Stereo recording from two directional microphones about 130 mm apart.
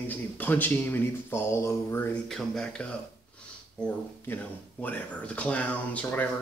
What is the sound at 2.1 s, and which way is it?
Speech, 5° left (ahead or behind).